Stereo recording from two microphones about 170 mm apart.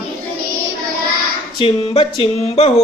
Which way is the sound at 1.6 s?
35° left (ahead or behind).